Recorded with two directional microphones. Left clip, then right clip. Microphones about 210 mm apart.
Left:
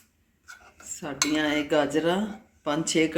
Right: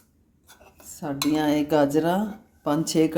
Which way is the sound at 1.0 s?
65° right (ahead or behind).